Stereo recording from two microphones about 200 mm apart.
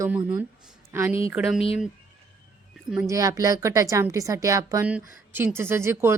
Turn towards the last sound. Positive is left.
turn(degrees=-15)  # may be behind; listen again after turning